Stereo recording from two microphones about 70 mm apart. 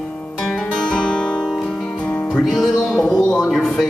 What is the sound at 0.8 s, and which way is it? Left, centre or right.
Music, centre.